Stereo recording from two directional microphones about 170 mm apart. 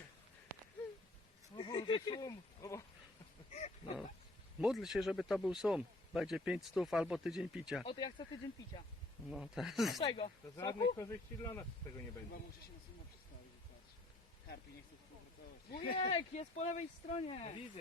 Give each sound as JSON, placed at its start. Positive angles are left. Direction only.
{"t": 1.5, "sound": "speech", "side_deg": 25}
{"t": 3.5, "sound": "a sound", "side_deg": 40}
{"t": 4.6, "sound": "speech", "side_deg": 0}
{"t": 7.9, "sound": "speech", "side_deg": 25}
{"t": 9.3, "sound": "speech", "side_deg": 0}
{"t": 10.0, "sound": "speech", "side_deg": 30}
{"t": 15.7, "sound": "speech", "side_deg": 65}
{"t": 16.0, "sound": "speech", "side_deg": 40}